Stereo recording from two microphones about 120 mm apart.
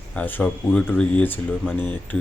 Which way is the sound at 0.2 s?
15° left (ahead or behind).